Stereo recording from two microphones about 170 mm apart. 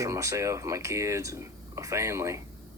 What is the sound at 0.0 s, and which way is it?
Speech, 20° right (ahead or behind).